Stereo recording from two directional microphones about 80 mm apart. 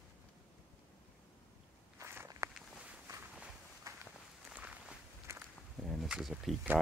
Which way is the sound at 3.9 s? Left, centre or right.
Right.